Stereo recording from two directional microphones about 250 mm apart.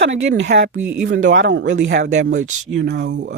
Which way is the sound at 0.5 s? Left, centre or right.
Right.